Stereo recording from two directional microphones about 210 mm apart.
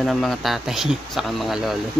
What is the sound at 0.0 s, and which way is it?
Speech, centre (ahead or behind).